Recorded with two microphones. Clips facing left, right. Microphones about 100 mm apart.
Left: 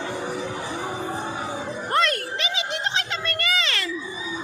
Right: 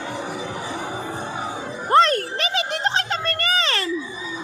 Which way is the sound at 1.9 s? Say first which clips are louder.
Right 7 dB; 35° right (ahead or behind).